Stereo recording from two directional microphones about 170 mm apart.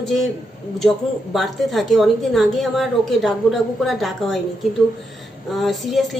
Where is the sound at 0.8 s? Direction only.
Centre (ahead or behind).